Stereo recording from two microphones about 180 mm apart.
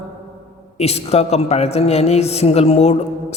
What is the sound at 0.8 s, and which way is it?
A man's voice, 35° left (ahead or behind).